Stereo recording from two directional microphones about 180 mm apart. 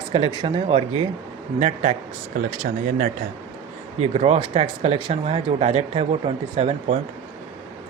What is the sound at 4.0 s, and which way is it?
Speech, 35° right (ahead or behind).